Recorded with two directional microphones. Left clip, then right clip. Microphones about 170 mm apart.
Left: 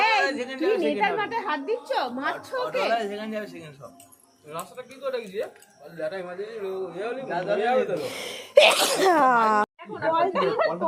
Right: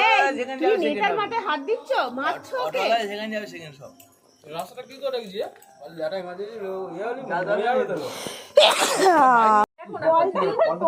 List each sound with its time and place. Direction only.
0.3 s a woman's voice: 30° left (ahead or behind); by 7.9 s 10° left (ahead or behind)
7.9 s a woman's voice: 25° left (ahead or behind)
8.7 s sneeze: 10° right (ahead or behind)
9.5 s a woman's voice: centre (ahead or behind)
10.1 s a woman's voice: 25° left (ahead or behind)